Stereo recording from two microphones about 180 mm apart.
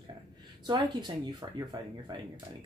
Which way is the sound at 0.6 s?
25° right (ahead or behind).